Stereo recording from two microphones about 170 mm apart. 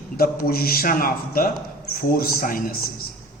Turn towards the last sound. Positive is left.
turn(degrees=60)  # may be behind; listen again after turning